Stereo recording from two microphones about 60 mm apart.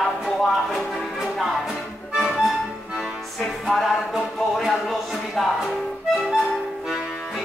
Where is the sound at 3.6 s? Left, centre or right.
Centre.